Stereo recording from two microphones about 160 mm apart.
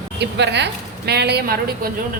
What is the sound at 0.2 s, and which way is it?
A woman's voice, 90° right.